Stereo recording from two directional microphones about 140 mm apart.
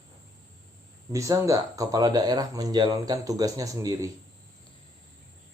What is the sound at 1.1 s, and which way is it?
Speech, 20° right (ahead or behind).